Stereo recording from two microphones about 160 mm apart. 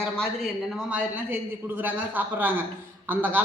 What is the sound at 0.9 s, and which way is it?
A woman's voice, 10° right (ahead or behind).